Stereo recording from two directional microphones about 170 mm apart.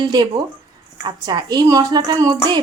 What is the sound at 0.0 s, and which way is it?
A woman's voice, 25° right (ahead or behind).